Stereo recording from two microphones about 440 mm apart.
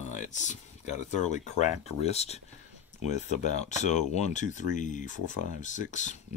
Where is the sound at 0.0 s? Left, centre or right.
Centre.